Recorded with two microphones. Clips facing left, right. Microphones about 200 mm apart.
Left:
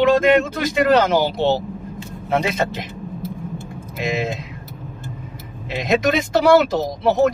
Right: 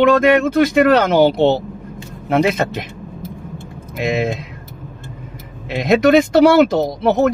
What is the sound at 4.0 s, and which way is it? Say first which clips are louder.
Speech: right 4 dB; 60° right (ahead or behind).